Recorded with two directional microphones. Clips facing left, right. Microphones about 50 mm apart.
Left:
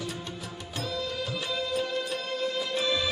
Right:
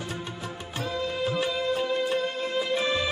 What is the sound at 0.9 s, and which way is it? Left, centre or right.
Music, right.